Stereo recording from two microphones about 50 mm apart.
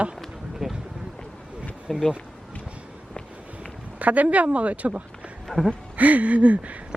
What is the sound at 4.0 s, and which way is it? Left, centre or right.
Speech, right.